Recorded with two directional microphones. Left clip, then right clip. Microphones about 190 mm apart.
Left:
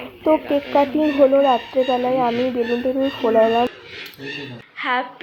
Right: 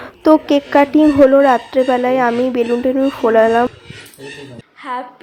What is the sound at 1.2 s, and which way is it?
Speech, 45° right (ahead or behind).